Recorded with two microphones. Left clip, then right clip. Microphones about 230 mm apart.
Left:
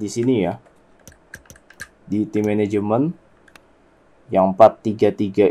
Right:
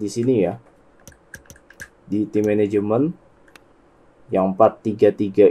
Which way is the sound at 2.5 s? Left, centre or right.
Left.